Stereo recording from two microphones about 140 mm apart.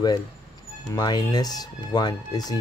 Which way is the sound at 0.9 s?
30° left (ahead or behind).